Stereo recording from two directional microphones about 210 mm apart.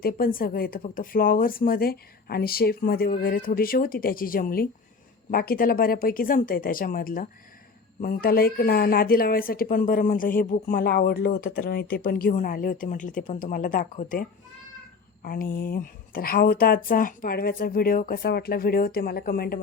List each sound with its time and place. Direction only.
0.0 s speech: 45° left (ahead or behind)